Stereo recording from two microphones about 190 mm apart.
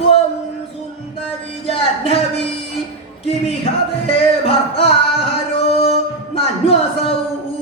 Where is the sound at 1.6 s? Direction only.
30° left (ahead or behind).